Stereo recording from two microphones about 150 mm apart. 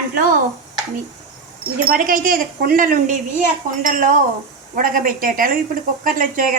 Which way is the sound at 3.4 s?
60° right (ahead or behind).